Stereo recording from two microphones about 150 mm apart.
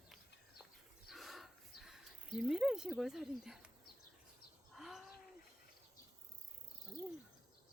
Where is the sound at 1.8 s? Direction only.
5° right (ahead or behind).